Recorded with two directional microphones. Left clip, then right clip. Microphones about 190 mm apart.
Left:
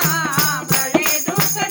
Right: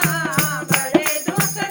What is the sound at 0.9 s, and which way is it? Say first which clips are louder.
Music: left 1 dB; 20° left (ahead or behind).